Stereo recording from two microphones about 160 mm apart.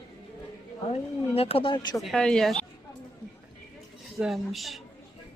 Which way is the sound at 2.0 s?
5° left (ahead or behind).